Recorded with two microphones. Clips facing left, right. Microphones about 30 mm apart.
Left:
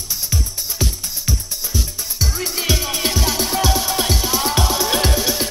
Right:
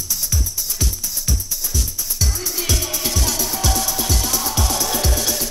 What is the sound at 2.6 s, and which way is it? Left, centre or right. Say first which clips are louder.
Music: left 3 dB; left.